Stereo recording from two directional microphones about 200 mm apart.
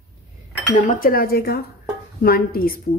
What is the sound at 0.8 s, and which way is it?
A woman's voice, 45° left (ahead or behind).